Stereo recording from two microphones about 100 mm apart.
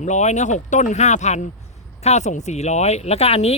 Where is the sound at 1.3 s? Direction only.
90° left.